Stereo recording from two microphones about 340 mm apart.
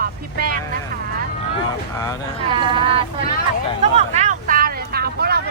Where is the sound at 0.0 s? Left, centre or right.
Right.